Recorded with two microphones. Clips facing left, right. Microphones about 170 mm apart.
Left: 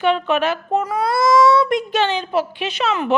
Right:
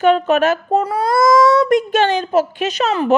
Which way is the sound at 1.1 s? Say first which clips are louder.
Right 2 dB; 50° right (ahead or behind).